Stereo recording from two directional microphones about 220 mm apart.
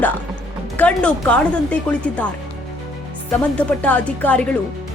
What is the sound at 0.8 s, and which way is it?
Speech, 5° left (ahead or behind).